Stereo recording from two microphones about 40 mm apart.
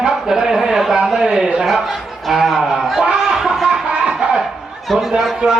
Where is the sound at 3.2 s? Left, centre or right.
Centre.